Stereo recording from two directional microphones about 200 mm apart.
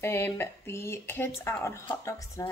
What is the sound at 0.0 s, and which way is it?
Speech, 10° left (ahead or behind).